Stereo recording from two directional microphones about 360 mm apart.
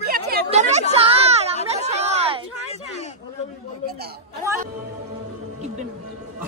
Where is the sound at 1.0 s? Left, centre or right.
Centre.